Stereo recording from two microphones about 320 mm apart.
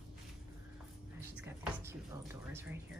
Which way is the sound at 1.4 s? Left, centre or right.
Centre.